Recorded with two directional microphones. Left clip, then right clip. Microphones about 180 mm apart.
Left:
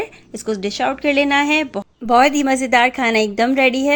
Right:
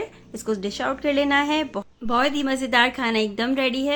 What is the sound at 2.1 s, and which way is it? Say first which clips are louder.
A woman's voice: left 9 dB; 35° left (ahead or behind).